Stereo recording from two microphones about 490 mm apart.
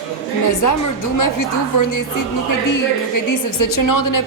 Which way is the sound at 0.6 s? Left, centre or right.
Left.